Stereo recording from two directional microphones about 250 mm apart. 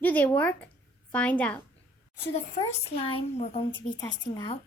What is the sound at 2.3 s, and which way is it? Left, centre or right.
A woman's voice, left.